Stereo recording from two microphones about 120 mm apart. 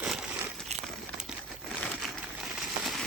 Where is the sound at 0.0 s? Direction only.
5° right (ahead or behind).